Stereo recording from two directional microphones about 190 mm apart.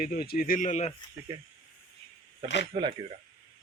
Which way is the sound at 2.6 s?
25° right (ahead or behind).